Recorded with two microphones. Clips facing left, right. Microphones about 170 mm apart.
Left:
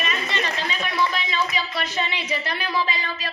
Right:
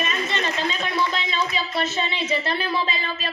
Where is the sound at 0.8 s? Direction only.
25° right (ahead or behind).